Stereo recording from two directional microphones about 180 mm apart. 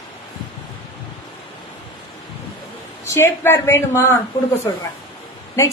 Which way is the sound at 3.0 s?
15° left (ahead or behind).